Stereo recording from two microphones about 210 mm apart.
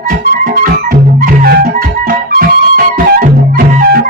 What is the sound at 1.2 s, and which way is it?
Music, 45° right (ahead or behind).